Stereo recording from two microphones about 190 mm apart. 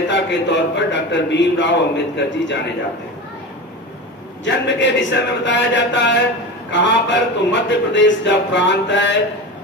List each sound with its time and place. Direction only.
0.1 s a man's voice: 70° left (ahead or behind)
4.5 s a man's voice: 70° left (ahead or behind)